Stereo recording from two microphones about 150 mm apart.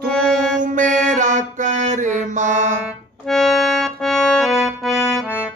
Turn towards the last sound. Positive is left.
turn(degrees=0)  # may be behind; listen again after turning